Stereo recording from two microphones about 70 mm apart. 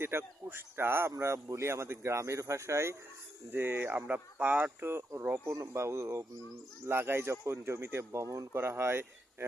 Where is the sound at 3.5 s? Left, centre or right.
Right.